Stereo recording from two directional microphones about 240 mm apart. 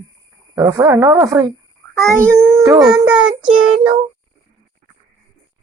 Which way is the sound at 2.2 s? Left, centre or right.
Centre.